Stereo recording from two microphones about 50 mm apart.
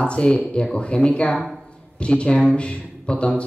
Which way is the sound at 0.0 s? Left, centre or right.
Left.